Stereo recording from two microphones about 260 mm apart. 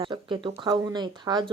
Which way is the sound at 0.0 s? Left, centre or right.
Centre.